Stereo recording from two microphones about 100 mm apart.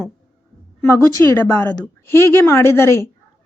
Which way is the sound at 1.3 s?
20° left (ahead or behind).